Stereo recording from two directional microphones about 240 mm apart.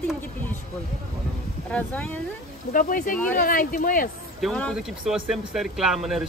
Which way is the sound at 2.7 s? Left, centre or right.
Left.